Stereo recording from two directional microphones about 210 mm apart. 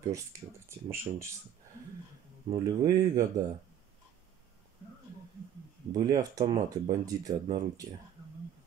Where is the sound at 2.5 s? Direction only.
20° right (ahead or behind).